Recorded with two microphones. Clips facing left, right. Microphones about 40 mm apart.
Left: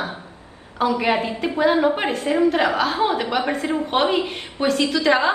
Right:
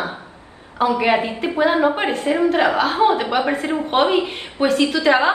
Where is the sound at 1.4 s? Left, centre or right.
Right.